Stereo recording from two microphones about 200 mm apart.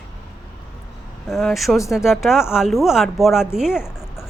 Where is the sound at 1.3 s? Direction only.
Centre (ahead or behind).